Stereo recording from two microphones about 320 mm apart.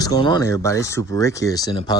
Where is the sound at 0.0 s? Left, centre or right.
Centre.